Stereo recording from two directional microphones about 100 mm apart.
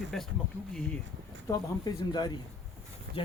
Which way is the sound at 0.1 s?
5° left (ahead or behind).